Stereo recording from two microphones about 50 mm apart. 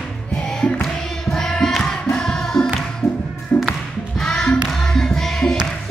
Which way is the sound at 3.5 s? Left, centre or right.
Left.